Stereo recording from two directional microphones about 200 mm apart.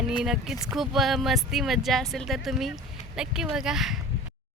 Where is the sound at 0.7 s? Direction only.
Centre (ahead or behind).